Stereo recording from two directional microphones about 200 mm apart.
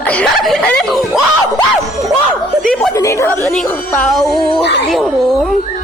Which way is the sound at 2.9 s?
15° left (ahead or behind).